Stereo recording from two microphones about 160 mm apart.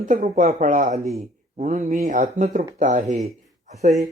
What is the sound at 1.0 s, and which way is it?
Speech, centre (ahead or behind).